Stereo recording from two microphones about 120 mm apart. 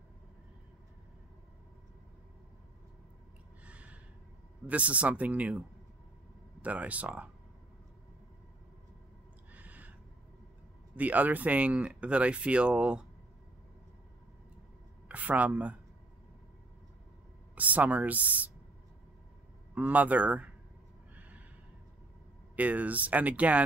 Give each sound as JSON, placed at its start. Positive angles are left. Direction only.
{"t": 3.6, "sound": "gasp", "side_deg": -10}
{"t": 4.6, "sound": "speech", "side_deg": -10}
{"t": 6.6, "sound": "speech", "side_deg": -10}
{"t": 9.5, "sound": "owl", "side_deg": -15}
{"t": 11.0, "sound": "speech", "side_deg": -15}
{"t": 15.0, "sound": "speech", "side_deg": -10}
{"t": 17.6, "sound": "speech", "side_deg": -15}
{"t": 19.7, "sound": "speech", "side_deg": -15}
{"t": 21.1, "sound": "neigh", "side_deg": -15}
{"t": 22.6, "sound": "speech", "side_deg": -10}